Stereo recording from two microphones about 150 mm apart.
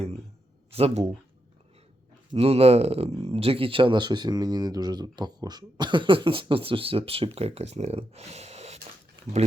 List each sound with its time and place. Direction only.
0.7 s speech: 40° right (ahead or behind)
2.3 s speech: 40° right (ahead or behind)